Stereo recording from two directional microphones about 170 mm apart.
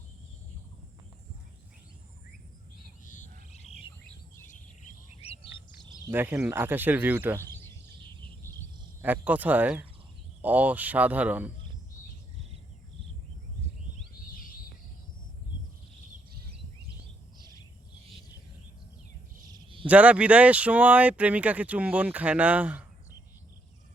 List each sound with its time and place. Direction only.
3.0 s frog: 50° left (ahead or behind)
3.5 s bird: 35° left (ahead or behind)
5.2 s bird: 35° left (ahead or behind)
6.1 s speech: 10° right (ahead or behind)
9.0 s speech: 10° right (ahead or behind)
19.5 s a sound: 30° right (ahead or behind)
19.9 s speech: 10° right (ahead or behind)